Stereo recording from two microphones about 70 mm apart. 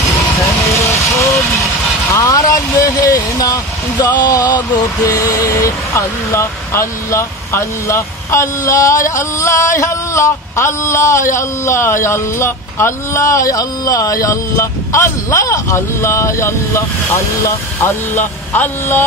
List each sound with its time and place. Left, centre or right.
2.1 s speech: left